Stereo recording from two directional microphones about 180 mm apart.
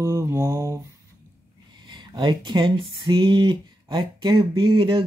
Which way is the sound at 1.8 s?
25° right (ahead or behind).